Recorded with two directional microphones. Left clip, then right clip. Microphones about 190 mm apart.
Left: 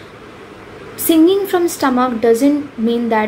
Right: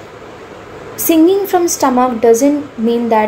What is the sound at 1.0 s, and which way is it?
A woman's voice, 20° left (ahead or behind).